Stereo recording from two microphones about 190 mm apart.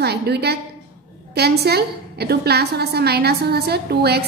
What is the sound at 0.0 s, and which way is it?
A woman's voice, 60° right (ahead or behind).